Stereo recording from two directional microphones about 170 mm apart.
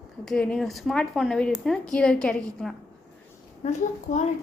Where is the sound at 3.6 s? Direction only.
40° left (ahead or behind).